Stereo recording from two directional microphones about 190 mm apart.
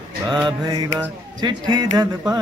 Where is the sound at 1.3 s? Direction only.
20° right (ahead or behind).